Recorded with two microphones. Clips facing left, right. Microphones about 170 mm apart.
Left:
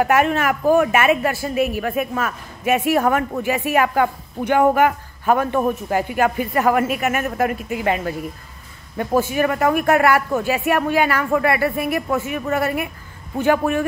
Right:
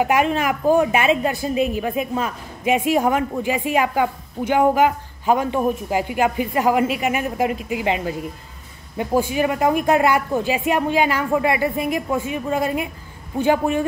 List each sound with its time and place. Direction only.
0.0 s speech: 15° right (ahead or behind)